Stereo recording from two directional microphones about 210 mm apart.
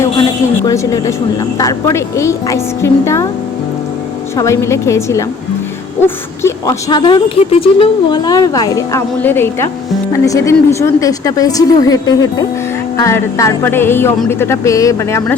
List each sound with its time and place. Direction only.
0.6 s speech: 15° left (ahead or behind)
4.4 s speech: 15° left (ahead or behind)
6.4 s speech: 15° left (ahead or behind)